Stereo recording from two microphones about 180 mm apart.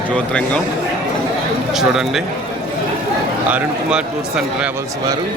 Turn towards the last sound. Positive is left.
turn(degrees=-5)  # may be behind; listen again after turning